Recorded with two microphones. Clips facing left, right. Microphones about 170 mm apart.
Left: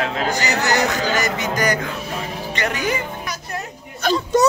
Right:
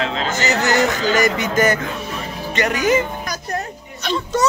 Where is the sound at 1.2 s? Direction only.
20° right (ahead or behind).